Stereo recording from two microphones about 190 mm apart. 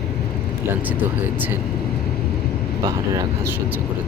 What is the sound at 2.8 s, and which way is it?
Speech, 15° right (ahead or behind).